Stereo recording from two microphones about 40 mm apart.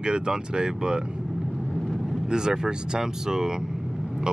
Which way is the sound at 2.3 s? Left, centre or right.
Centre.